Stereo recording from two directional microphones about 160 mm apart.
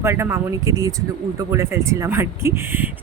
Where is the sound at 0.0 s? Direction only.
15° right (ahead or behind).